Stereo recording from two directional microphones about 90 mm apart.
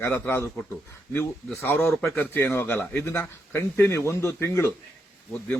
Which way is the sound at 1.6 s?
20° left (ahead or behind).